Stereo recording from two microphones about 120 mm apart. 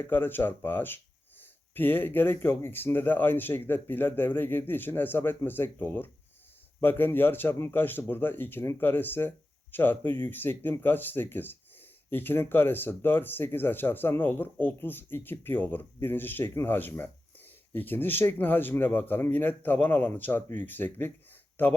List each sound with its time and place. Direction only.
0.1 s speech: 15° left (ahead or behind)